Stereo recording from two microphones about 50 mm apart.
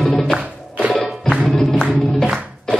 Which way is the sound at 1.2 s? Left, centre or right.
Centre.